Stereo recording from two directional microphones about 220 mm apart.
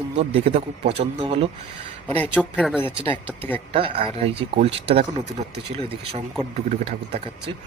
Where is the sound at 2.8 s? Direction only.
25° right (ahead or behind).